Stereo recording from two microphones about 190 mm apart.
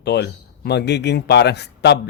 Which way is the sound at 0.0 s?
60° left (ahead or behind).